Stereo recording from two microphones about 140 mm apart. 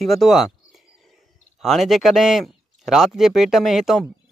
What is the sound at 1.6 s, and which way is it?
Speech, centre (ahead or behind).